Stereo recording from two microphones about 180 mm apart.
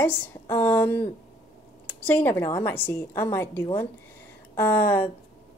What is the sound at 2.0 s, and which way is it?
A woman's voice, 10° left (ahead or behind).